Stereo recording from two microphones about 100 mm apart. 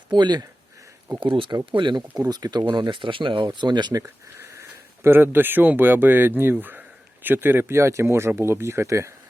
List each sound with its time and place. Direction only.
0.1 s speech: 45° right (ahead or behind)
2.1 s speech: 40° right (ahead or behind)
2.7 s speech: 55° right (ahead or behind)
4.0 s speech: 25° right (ahead or behind)